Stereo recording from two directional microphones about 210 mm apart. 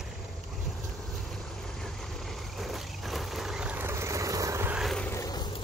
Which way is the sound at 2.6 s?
Centre (ahead or behind).